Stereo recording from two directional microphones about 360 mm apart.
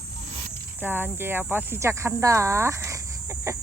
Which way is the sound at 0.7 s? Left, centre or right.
Centre.